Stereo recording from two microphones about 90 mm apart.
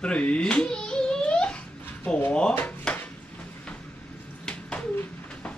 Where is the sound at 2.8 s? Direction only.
20° left (ahead or behind).